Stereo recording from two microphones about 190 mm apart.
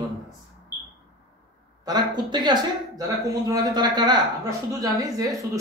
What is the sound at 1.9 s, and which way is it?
Speech, 20° right (ahead or behind).